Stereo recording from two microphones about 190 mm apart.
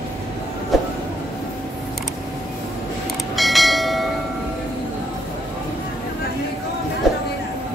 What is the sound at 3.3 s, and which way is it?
Church bell, centre (ahead or behind).